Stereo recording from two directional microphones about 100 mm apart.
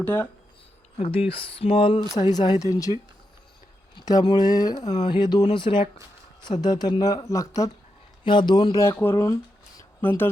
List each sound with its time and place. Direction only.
0.0 s speech: 15° left (ahead or behind)
1.3 s a sound: 65° left (ahead or behind)
2.3 s speech: 45° left (ahead or behind)
3.9 s speech: 45° left (ahead or behind)
6.4 s speech: 45° left (ahead or behind)
8.2 s speech: 50° left (ahead or behind)
8.7 s speech: 30° left (ahead or behind)
10.0 s speech: 20° left (ahead or behind)